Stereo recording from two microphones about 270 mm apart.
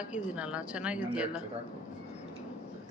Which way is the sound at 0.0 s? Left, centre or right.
Centre.